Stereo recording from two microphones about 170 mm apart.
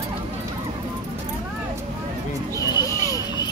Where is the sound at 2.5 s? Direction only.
20° left (ahead or behind).